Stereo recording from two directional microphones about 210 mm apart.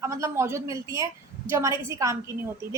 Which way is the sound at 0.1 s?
15° right (ahead or behind).